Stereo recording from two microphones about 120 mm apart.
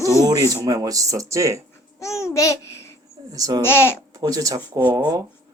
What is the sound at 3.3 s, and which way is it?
Speech, 30° right (ahead or behind).